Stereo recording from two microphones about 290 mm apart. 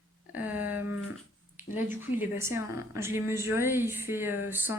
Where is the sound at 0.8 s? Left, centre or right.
Left.